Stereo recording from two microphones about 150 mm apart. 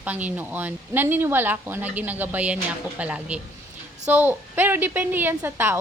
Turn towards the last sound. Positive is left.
turn(degrees=-15)  # may be behind; listen again after turning